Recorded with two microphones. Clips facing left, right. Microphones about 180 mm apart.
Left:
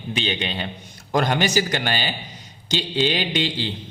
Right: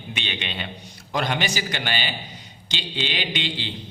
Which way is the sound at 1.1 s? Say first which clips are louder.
Left 5 dB; 45° left (ahead or behind).